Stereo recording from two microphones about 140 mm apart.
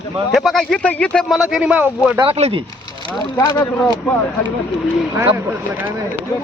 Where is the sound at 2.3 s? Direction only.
45° right (ahead or behind).